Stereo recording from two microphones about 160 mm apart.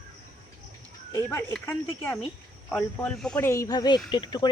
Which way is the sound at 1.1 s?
15° left (ahead or behind).